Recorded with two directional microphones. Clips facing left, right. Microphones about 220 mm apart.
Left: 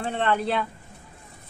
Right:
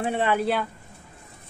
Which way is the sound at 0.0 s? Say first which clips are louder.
Right 2 dB; 10° right (ahead or behind).